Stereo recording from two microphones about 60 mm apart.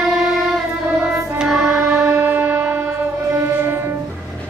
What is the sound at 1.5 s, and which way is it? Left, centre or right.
Music, centre.